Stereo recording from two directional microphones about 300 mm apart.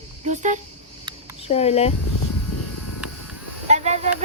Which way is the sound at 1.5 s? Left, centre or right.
Left.